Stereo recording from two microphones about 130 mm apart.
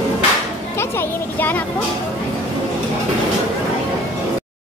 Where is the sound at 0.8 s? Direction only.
15° left (ahead or behind).